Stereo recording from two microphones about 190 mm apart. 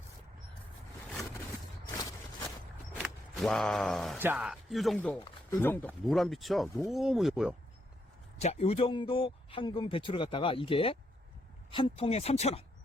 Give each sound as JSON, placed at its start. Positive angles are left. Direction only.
{"t": 3.0, "sound": "speech", "side_deg": 0}
{"t": 8.4, "sound": "a man's voice", "side_deg": 35}